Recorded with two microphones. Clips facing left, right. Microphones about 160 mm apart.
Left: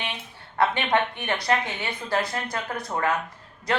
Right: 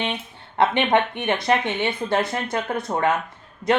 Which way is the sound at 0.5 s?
20° right (ahead or behind).